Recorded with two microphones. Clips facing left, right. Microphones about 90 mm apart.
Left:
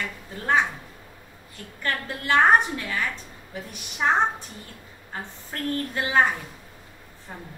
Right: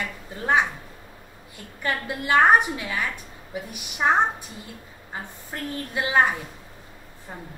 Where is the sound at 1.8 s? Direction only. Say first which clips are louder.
Right 2 dB; 15° right (ahead or behind).